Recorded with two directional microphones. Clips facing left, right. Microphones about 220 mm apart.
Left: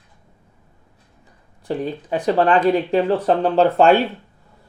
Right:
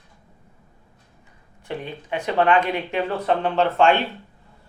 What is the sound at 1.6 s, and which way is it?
Speech, 35° left (ahead or behind).